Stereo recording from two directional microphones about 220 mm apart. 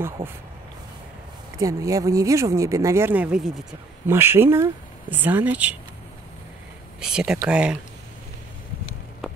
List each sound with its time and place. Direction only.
0.2 s speech: 25° right (ahead or behind)
1.6 s speech: 15° right (ahead or behind)
7.0 s speech: 5° right (ahead or behind)